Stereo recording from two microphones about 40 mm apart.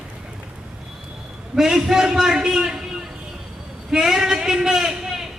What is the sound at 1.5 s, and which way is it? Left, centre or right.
A man's voice, centre.